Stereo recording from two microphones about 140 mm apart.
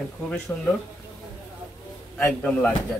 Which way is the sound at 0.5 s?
20° left (ahead or behind).